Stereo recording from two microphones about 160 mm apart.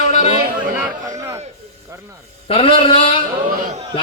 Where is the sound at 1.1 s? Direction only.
20° right (ahead or behind).